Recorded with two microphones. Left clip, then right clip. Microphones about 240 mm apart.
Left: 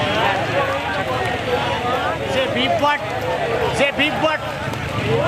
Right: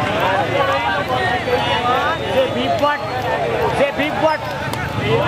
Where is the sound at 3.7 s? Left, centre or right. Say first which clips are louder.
Right 1 dB; centre.